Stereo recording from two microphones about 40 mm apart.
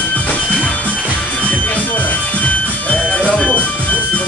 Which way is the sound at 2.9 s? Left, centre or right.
Left.